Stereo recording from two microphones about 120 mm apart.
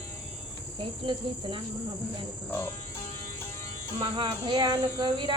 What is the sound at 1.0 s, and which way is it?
Cricket, 45° right (ahead or behind).